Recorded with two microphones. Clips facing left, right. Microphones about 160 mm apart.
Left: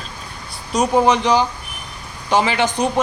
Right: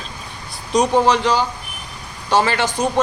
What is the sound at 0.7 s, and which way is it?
Speech, centre (ahead or behind).